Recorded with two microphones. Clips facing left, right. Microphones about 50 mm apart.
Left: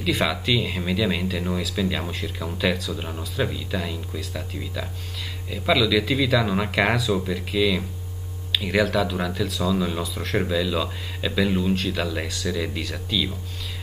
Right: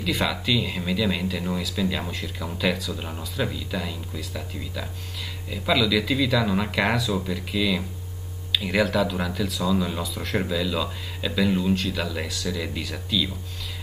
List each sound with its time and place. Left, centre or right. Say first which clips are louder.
0.0 s speech: left 2 dB; centre
5.5 s speech: left 2 dB; centre
8.5 s speech: left 1 dB; centre
9.7 s speech: even; centre
10.0 s speech: left 2 dB; centre